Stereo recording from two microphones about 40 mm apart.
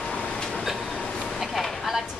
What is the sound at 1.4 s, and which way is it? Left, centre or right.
Vehicle, centre.